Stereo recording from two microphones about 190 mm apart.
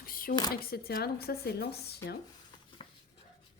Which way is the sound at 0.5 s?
55° left (ahead or behind).